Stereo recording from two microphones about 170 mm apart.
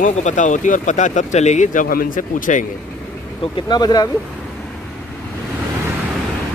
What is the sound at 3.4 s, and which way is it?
Speech, 25° left (ahead or behind).